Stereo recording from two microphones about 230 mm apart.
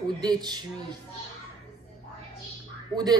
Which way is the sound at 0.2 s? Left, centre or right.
Centre.